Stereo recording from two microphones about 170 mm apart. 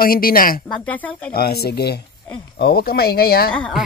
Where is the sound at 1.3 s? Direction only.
65° left (ahead or behind).